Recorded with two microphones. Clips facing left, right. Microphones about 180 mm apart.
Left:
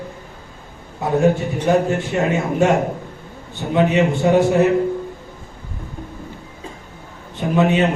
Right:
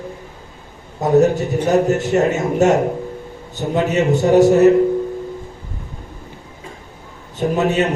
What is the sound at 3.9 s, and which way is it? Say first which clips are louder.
Speech: right 5 dB; 40° right (ahead or behind).